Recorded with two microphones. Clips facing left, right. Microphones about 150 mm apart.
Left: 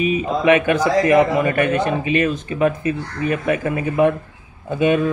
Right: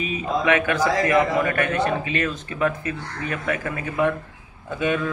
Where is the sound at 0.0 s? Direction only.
20° left (ahead or behind).